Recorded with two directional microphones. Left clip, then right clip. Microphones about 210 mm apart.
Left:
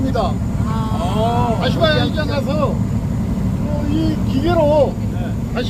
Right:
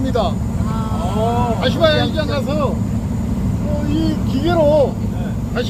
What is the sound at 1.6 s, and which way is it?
Speech, 50° right (ahead or behind).